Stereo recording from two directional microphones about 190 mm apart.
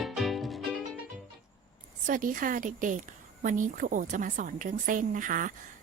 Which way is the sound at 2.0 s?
45° right (ahead or behind).